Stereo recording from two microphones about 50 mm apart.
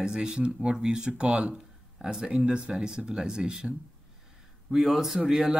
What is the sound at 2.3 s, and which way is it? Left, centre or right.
Speech, right.